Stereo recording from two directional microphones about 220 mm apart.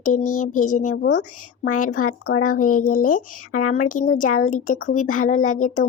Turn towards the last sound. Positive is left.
turn(degrees=35)  # may be behind; listen again after turning